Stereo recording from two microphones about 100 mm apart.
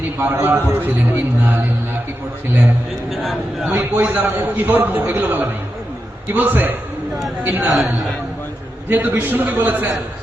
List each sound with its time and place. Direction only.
0.3 s a man's voice: 30° right (ahead or behind)
0.7 s a man's voice: 20° right (ahead or behind)
2.5 s a man's voice: 20° right (ahead or behind)
3.1 s speech: centre (ahead or behind)
3.7 s a man's voice: 20° right (ahead or behind)
8.9 s a man's voice: 20° right (ahead or behind)